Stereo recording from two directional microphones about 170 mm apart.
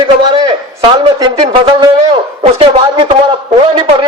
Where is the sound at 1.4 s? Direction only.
30° right (ahead or behind).